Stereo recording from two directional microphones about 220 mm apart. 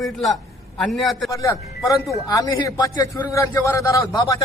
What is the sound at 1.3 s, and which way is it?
A man's voice, 15° left (ahead or behind).